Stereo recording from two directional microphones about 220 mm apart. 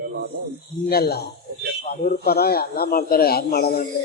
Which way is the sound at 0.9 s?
45° left (ahead or behind).